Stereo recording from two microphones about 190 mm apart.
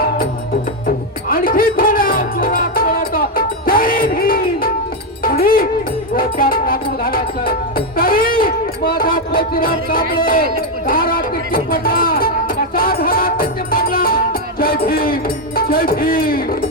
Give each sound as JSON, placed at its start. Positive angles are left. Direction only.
{"t": 0.9, "sound": "music", "side_deg": 50}
{"t": 7.9, "sound": "a sound", "side_deg": 50}
{"t": 10.8, "sound": "music", "side_deg": 50}